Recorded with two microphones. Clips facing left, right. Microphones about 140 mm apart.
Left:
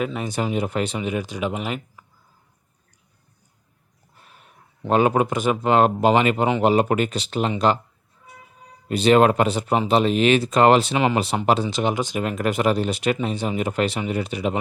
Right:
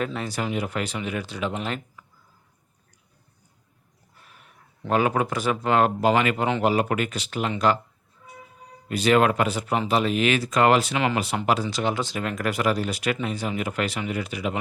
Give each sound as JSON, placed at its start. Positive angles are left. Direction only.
{"t": 0.0, "sound": "speech", "side_deg": 15}
{"t": 4.3, "sound": "speech", "side_deg": 25}
{"t": 8.9, "sound": "speech", "side_deg": 25}